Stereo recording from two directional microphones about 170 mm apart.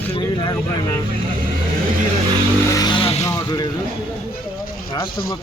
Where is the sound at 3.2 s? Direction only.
20° left (ahead or behind).